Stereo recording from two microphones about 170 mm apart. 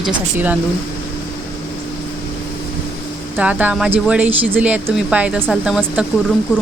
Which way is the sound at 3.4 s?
10° right (ahead or behind).